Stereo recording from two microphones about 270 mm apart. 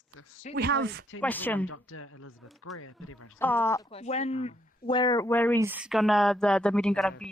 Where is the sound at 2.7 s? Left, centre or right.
Left.